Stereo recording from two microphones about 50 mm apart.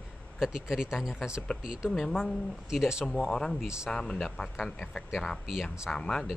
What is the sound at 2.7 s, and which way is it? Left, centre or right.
Speech, centre.